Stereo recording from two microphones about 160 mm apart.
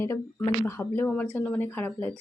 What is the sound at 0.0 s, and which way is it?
Speech, 15° left (ahead or behind).